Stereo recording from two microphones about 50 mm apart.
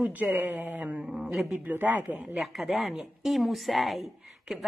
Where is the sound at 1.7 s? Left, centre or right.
Right.